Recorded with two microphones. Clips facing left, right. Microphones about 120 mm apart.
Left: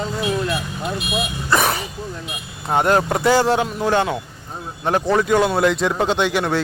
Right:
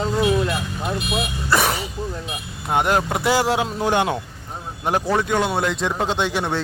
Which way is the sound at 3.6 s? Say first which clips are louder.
Left 1 dB; 20° right (ahead or behind).